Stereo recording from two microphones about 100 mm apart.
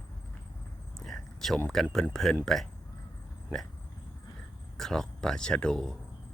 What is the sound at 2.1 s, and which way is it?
Speech, 5° left (ahead or behind).